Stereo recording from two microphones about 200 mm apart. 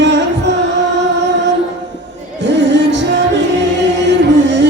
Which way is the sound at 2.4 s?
60° right (ahead or behind).